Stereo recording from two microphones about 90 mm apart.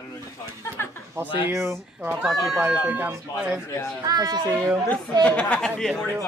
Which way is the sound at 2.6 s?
15° right (ahead or behind).